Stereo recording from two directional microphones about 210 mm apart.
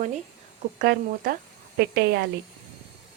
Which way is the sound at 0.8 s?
45° right (ahead or behind).